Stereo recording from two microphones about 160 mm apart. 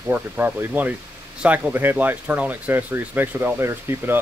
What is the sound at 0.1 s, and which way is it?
Speech, 10° right (ahead or behind).